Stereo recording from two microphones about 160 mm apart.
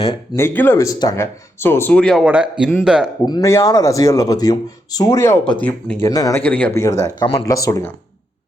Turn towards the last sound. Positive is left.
turn(degrees=20)  # may be behind; listen again after turning